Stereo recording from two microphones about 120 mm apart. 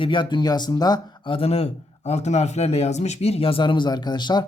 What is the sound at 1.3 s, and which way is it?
A man's voice, 55° left (ahead or behind).